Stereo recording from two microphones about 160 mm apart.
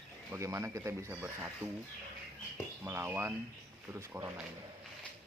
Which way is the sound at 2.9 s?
15° right (ahead or behind).